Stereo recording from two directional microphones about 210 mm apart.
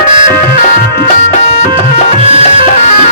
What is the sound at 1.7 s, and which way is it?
Music, 30° right (ahead or behind).